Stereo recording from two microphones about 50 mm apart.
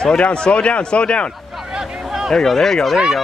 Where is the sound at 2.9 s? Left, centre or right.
Centre.